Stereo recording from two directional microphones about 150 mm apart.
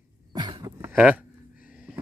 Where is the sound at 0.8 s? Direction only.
10° right (ahead or behind).